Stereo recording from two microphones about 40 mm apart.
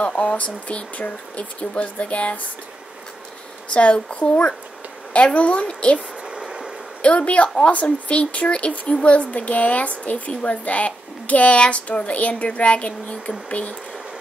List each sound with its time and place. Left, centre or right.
0.0 s a woman's voice: left
3.7 s a woman's voice: left
5.1 s a woman's voice: left
5.9 s a sound: right
7.0 s a woman's voice: left